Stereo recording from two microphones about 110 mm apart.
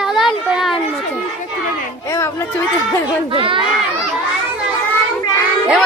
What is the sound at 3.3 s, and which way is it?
Speech, 50° right (ahead or behind).